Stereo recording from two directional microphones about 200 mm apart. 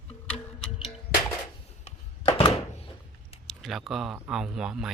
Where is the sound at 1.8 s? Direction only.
25° left (ahead or behind).